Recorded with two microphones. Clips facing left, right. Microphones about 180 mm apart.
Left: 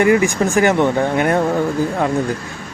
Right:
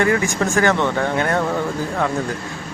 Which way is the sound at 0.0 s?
15° left (ahead or behind).